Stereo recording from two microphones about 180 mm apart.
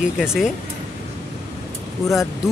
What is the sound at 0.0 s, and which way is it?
Speech, 5° right (ahead or behind).